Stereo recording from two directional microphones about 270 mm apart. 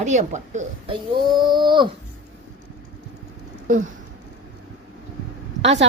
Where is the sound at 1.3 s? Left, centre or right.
Centre.